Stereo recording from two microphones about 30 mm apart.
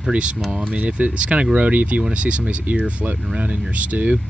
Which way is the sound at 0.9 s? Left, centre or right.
Right.